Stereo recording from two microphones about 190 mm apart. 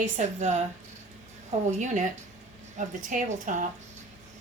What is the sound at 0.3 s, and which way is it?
Speech, 40° right (ahead or behind).